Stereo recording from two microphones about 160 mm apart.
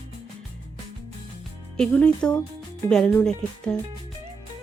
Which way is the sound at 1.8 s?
5° left (ahead or behind).